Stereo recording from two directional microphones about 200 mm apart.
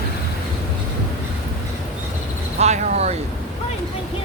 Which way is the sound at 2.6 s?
35° right (ahead or behind).